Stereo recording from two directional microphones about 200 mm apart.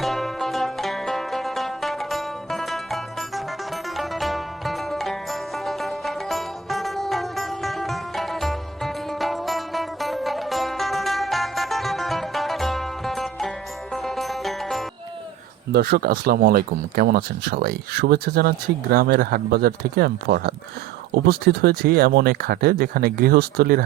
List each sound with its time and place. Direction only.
0.0 s music: centre (ahead or behind)
15.7 s speech: 50° right (ahead or behind)